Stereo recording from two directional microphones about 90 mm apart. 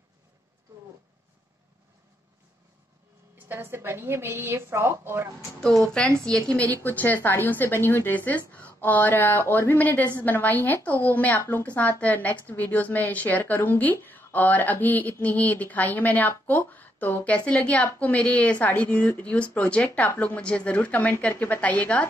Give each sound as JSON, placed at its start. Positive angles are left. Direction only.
{"t": 3.3, "sound": "a woman's voice", "side_deg": -20}
{"t": 5.6, "sound": "speech", "side_deg": 5}
{"t": 6.7, "sound": "a woman's voice", "side_deg": 20}